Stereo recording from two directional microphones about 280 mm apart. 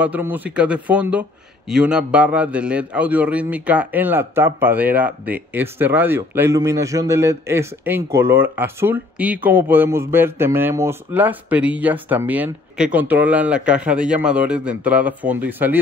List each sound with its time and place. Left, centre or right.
0.0 s a man's voice: centre